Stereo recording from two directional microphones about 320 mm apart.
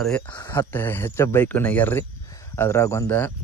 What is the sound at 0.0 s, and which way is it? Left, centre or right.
Speech, centre.